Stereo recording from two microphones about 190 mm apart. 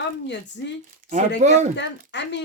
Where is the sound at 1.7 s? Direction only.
65° left (ahead or behind).